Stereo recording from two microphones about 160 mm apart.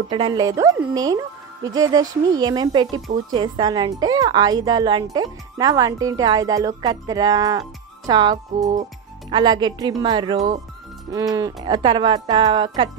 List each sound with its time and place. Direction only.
0.1 s speech: 25° right (ahead or behind)